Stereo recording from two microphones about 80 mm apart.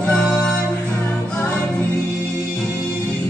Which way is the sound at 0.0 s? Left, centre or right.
Centre.